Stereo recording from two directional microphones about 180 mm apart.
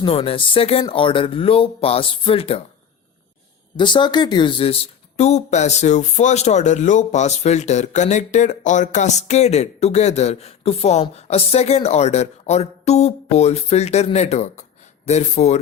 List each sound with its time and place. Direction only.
0.0 s speech: 30° left (ahead or behind)
3.8 s speech: 25° left (ahead or behind)